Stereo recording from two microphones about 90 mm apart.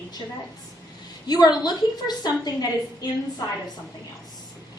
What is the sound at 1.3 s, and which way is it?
A woman's voice, 50° left (ahead or behind).